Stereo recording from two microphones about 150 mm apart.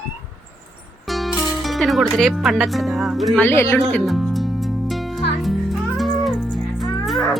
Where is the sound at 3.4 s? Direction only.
15° left (ahead or behind).